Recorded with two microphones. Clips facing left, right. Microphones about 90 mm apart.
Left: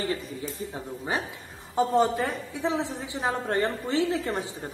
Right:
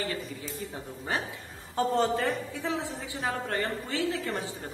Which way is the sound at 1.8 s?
15° left (ahead or behind).